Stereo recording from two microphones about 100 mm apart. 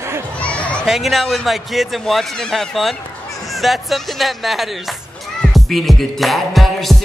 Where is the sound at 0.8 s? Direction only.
Centre (ahead or behind).